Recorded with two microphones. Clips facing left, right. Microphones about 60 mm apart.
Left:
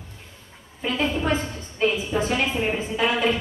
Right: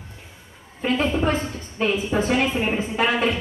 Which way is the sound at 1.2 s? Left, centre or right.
Right.